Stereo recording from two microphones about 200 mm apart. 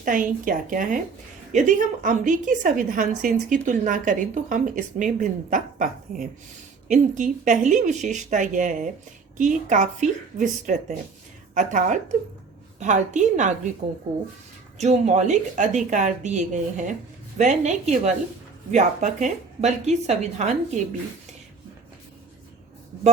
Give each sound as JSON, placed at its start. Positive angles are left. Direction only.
{"t": 0.0, "sound": "a woman's voice", "side_deg": -40}
{"t": 14.8, "sound": "a woman's voice", "side_deg": -35}